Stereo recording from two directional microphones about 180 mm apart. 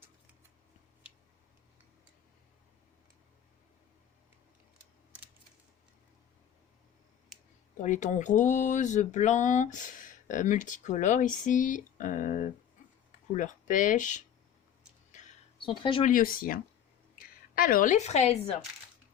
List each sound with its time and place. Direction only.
7.8 s speech: 40° left (ahead or behind)
15.6 s speech: 30° left (ahead or behind)
16.0 s a woman's voice: 50° left (ahead or behind)